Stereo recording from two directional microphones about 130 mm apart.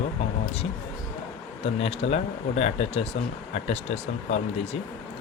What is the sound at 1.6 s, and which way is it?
Speech, 55° left (ahead or behind).